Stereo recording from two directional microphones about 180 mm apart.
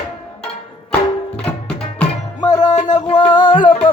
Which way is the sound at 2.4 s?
20° left (ahead or behind).